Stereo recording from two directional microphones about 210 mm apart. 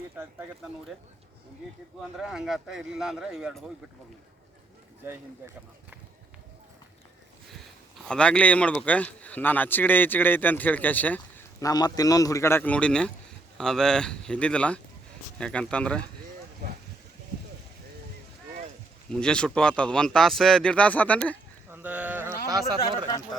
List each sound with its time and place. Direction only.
2.1 s speech: centre (ahead or behind)
8.0 s speech: 5° left (ahead or behind)
16.6 s a sound: 45° right (ahead or behind)
19.1 s speech: 5° left (ahead or behind)
21.7 s speech: 10° right (ahead or behind)
22.8 s speech: 15° left (ahead or behind)